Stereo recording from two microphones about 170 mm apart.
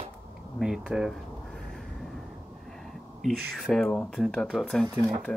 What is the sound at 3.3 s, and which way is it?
Speech, centre (ahead or behind).